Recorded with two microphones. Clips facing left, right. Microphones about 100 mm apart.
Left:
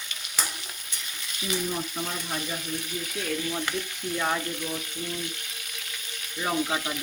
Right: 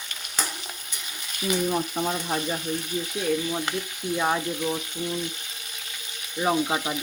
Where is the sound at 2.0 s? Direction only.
40° right (ahead or behind).